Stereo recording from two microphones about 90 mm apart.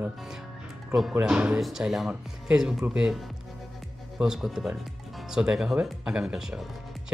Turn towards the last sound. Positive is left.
turn(degrees=-5)  # may be behind; listen again after turning